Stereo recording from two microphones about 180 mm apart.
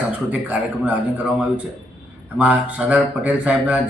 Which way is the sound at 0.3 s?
10° right (ahead or behind).